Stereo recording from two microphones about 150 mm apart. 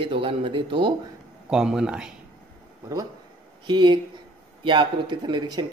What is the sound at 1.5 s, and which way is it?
Speech, 5° right (ahead or behind).